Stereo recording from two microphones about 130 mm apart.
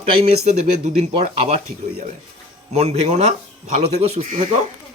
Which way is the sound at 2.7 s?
55° right (ahead or behind).